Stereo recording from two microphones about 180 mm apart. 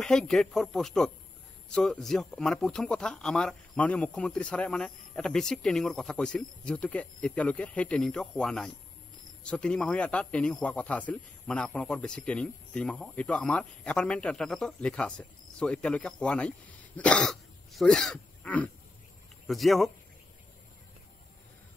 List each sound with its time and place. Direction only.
0.0 s a man's voice: 5° left (ahead or behind)